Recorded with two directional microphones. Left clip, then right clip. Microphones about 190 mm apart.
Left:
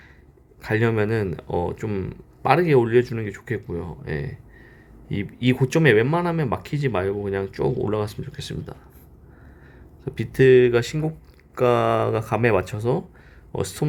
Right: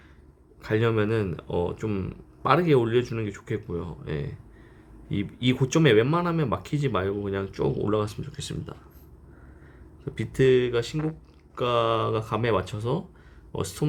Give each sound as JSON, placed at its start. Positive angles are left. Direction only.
{"t": 0.6, "sound": "speech", "side_deg": 10}
{"t": 10.1, "sound": "speech", "side_deg": 10}
{"t": 10.7, "sound": "speech", "side_deg": 30}